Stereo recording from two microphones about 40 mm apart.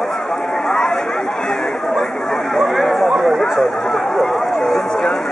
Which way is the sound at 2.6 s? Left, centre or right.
Centre.